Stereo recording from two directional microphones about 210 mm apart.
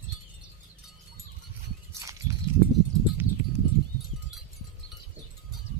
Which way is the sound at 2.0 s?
15° right (ahead or behind).